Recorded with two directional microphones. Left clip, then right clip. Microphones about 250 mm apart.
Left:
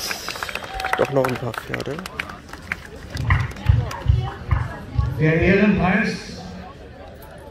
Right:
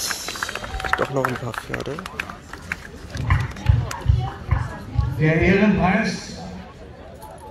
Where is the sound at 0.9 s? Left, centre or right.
Left.